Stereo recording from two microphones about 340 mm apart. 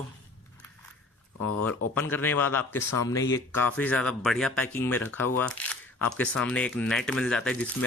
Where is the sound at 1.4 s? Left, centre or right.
Left.